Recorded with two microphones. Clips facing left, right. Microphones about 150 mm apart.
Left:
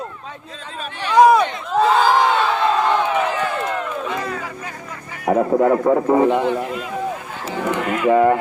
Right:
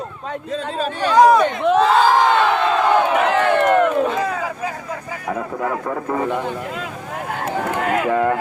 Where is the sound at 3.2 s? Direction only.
70° right (ahead or behind).